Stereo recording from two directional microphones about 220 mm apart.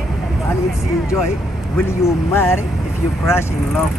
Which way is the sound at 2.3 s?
10° left (ahead or behind).